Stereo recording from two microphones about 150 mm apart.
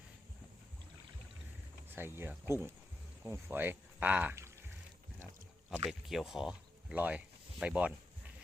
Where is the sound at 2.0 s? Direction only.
15° right (ahead or behind).